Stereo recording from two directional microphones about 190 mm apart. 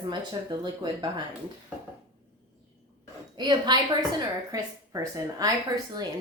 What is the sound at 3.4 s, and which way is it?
Speech, 25° right (ahead or behind).